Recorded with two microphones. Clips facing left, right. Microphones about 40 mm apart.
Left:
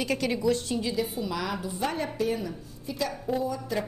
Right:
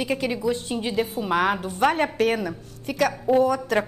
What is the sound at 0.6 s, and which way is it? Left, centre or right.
A woman's voice, right.